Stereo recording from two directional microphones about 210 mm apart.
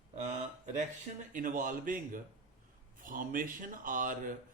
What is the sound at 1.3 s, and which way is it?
A man's voice, 40° right (ahead or behind).